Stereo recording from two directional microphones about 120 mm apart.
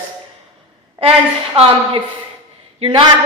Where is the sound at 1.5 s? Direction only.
55° right (ahead or behind).